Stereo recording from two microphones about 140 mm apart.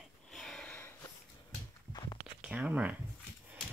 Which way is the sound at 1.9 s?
30° left (ahead or behind).